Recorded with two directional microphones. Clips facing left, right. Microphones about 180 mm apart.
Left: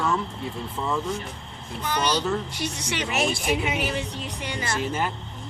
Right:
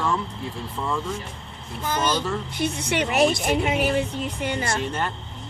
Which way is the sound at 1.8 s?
45° right (ahead or behind).